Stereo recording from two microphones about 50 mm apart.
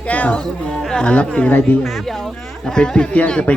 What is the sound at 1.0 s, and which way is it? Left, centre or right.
Speech, left.